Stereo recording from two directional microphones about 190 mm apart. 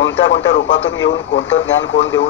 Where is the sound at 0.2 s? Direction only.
80° left.